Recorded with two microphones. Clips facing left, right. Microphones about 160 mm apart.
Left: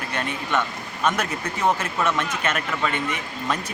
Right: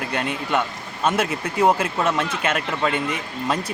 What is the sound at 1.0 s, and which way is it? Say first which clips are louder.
Speech: right 3 dB; 30° right (ahead or behind).